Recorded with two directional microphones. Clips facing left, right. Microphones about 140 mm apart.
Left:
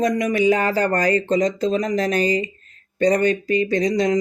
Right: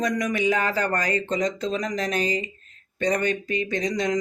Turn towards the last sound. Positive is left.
turn(degrees=35)  # may be behind; listen again after turning